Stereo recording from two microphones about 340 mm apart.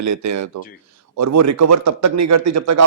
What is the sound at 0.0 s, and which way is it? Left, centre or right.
A man's voice, right.